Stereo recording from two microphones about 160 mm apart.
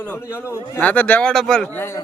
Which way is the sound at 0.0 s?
15° left (ahead or behind).